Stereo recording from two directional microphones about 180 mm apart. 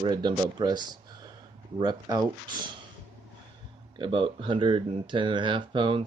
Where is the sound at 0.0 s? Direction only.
25° right (ahead or behind).